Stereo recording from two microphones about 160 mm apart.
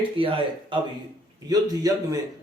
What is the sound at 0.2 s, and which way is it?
A man's voice, 35° right (ahead or behind).